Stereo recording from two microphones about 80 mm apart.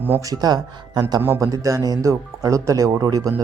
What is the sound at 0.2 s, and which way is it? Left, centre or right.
Speech, right.